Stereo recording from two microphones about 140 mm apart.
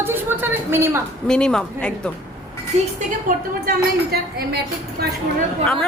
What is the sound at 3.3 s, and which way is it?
Speech, 80° right.